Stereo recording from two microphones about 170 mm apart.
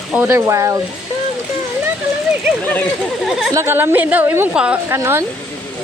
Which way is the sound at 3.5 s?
15° right (ahead or behind).